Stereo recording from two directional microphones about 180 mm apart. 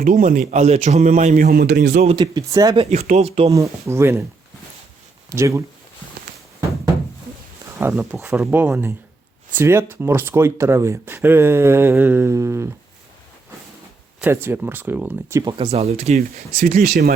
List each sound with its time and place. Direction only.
0.0 s a man's voice: 45° right (ahead or behind)
1.5 s speech: 65° right (ahead or behind)
2.0 s speech: 25° right (ahead or behind)
2.8 s speech: 35° right (ahead or behind)
3.5 s speech: 15° right (ahead or behind)
5.3 s speech: 15° right (ahead or behind)
7.8 s speech: 10° right (ahead or behind)
14.2 s speech: 10° right (ahead or behind)
15.4 s speech: 30° right (ahead or behind)
16.6 s a man's voice: 50° right (ahead or behind)